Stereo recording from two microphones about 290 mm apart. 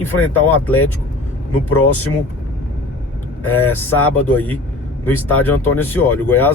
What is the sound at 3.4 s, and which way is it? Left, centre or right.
Speech, centre.